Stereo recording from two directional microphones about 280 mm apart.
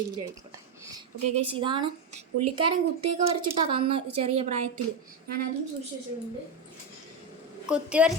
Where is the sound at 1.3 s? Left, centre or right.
Centre.